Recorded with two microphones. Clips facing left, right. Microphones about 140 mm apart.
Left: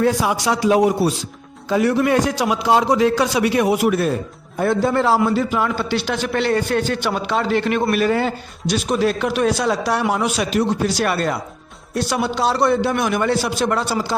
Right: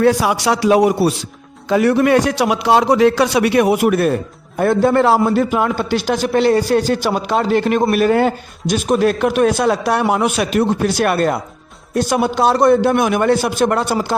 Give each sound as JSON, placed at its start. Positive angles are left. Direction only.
{"t": 0.0, "sound": "a man's voice", "side_deg": -75}